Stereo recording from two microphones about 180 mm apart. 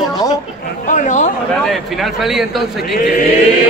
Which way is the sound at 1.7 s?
Centre (ahead or behind).